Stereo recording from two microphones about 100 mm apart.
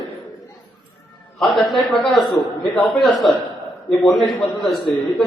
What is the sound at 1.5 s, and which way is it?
A man's voice, centre (ahead or behind).